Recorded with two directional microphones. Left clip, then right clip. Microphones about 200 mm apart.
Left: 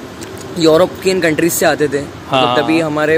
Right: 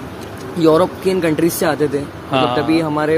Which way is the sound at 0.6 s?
10° right (ahead or behind).